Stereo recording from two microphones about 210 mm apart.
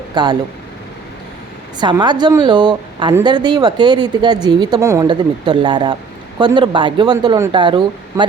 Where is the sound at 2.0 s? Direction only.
20° right (ahead or behind).